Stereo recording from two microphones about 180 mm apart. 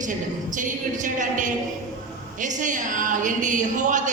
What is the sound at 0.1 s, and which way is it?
Speech, 45° right (ahead or behind).